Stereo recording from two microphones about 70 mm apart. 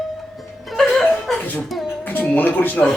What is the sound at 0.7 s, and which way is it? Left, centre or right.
Music, centre.